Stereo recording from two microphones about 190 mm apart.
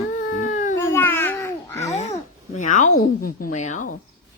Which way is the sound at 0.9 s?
10° left (ahead or behind).